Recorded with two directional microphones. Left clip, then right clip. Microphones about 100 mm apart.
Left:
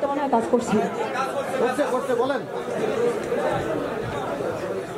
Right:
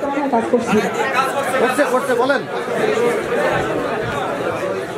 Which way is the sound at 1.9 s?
35° right (ahead or behind).